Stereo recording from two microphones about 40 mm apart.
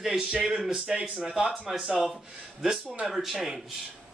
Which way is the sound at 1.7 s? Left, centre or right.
Centre.